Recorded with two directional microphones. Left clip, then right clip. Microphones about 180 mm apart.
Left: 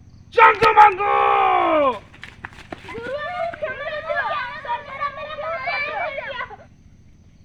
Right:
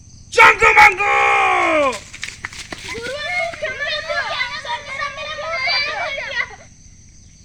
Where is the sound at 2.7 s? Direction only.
Centre (ahead or behind).